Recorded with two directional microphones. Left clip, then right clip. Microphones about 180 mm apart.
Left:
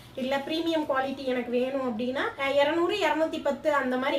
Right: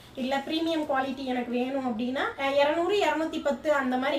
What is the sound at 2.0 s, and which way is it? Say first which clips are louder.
A woman's voice: even; 20° left (ahead or behind).